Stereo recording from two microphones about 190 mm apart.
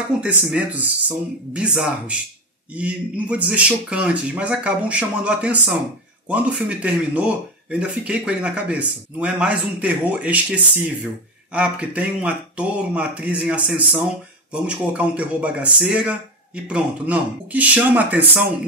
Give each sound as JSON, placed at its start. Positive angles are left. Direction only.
{"t": 0.2, "sound": "a man's voice", "side_deg": -5}